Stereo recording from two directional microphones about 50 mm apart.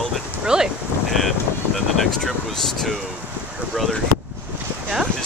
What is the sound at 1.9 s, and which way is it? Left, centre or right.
Speech, centre.